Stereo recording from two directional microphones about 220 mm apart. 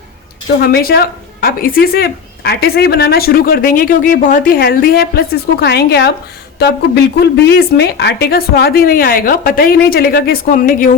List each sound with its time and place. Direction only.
0.6 s speech: 45° left (ahead or behind)